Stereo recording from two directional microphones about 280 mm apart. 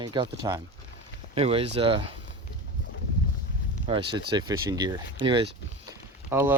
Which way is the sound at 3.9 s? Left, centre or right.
Centre.